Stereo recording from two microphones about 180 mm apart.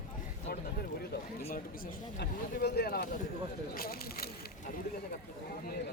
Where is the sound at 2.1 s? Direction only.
65° left (ahead or behind).